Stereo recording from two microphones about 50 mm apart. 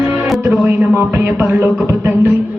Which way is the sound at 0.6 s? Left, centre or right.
Right.